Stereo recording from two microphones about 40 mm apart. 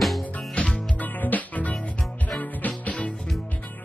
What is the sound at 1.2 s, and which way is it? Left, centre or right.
Music, left.